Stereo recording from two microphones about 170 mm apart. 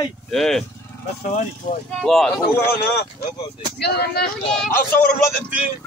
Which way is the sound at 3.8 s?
65° left (ahead or behind).